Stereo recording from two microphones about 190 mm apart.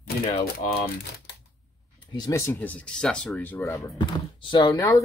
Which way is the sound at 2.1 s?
20° left (ahead or behind).